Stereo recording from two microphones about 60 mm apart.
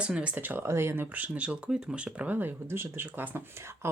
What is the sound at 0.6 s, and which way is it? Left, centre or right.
Speech, right.